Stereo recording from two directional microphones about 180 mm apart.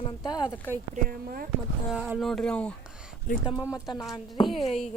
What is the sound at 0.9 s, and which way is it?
Speech, 55° right (ahead or behind).